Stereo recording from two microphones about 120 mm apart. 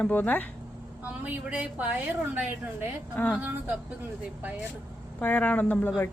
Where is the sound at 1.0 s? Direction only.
10° right (ahead or behind).